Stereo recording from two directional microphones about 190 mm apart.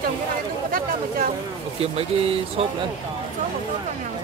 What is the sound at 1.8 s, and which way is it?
Speech, 30° right (ahead or behind).